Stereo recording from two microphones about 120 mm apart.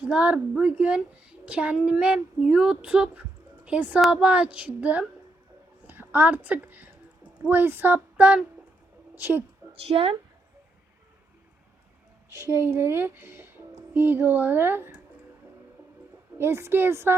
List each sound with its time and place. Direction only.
0.0 s a child's voice: 10° right (ahead or behind)
9.8 s a woman's voice: 55° right (ahead or behind)
12.3 s a woman's voice: 20° right (ahead or behind)
16.4 s a woman's voice: 20° right (ahead or behind)